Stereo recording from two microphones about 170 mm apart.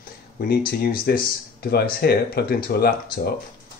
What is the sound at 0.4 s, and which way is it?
Speech, 65° left (ahead or behind).